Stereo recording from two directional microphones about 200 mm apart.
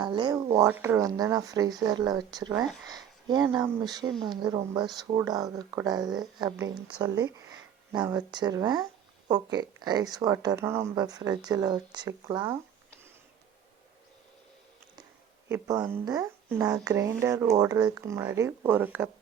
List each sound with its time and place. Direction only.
0.0 s speech: 20° right (ahead or behind)
15.4 s speech: 15° right (ahead or behind)